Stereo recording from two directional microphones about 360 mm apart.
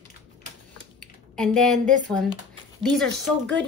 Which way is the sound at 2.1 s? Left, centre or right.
Centre.